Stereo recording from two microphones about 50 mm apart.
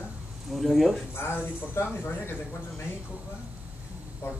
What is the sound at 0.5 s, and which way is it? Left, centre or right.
Speech, centre.